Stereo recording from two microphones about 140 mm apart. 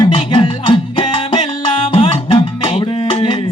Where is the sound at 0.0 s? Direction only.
40° left (ahead or behind).